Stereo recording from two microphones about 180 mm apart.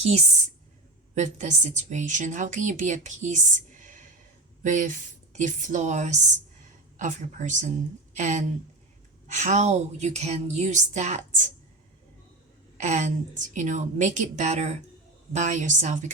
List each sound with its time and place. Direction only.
0.0 s a woman's voice: 40° right (ahead or behind)
12.7 s a woman's voice: 40° right (ahead or behind)